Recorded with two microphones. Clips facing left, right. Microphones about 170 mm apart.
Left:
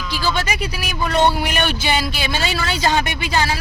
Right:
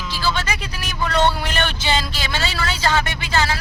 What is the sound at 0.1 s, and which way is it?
A man's voice, 15° left (ahead or behind).